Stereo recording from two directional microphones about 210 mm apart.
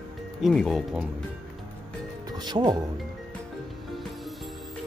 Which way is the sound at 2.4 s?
20° right (ahead or behind).